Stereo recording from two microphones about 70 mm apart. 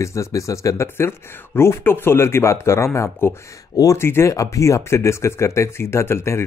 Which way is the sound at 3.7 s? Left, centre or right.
Left.